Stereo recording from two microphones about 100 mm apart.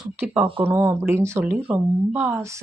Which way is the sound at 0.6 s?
25° right (ahead or behind).